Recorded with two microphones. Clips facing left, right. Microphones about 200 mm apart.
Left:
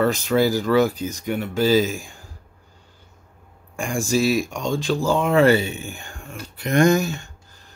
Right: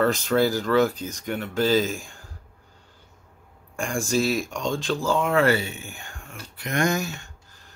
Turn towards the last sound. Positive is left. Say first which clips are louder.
# left 7 dB
turn(degrees=30)  # may be behind; listen again after turning